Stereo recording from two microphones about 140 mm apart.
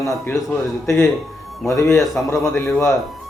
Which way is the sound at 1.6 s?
20° left (ahead or behind).